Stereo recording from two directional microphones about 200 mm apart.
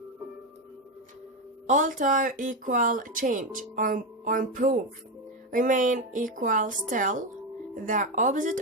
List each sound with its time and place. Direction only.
1.6 s speech: 40° right (ahead or behind)